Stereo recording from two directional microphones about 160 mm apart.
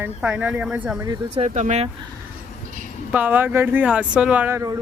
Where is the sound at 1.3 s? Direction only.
45° right (ahead or behind).